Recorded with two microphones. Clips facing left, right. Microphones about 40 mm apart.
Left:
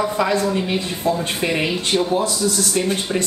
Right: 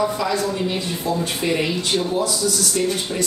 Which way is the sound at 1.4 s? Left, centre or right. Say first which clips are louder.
Even; left.